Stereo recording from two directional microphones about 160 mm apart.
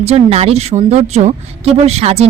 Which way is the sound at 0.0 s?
40° right (ahead or behind).